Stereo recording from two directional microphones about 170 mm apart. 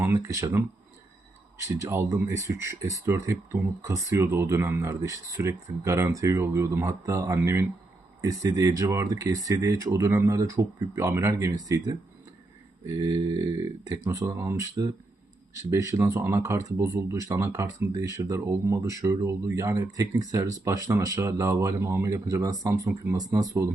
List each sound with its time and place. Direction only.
0.0 s speech: 15° right (ahead or behind)